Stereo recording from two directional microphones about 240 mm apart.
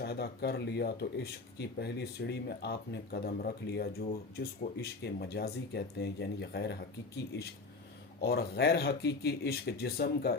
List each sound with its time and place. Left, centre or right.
0.0 s speech: left
8.2 s speech: left